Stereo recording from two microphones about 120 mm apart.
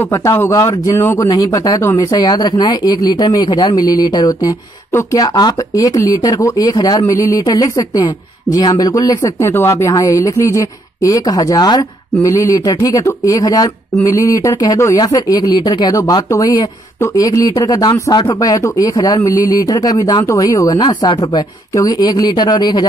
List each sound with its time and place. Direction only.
0.1 s speech: 20° left (ahead or behind)